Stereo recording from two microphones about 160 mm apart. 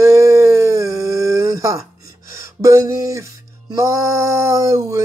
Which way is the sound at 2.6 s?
20° right (ahead or behind).